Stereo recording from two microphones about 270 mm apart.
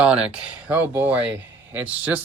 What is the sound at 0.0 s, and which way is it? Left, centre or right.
Speech, centre.